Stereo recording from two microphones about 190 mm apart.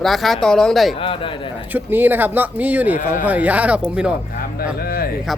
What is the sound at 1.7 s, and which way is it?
Speech, 10° right (ahead or behind).